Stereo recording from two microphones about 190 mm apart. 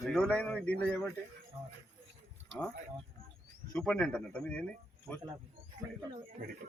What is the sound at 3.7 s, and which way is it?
Speech, 5° left (ahead or behind).